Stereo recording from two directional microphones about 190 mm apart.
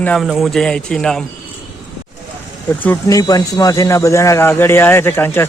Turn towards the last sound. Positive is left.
turn(degrees=10)  # may be behind; listen again after turning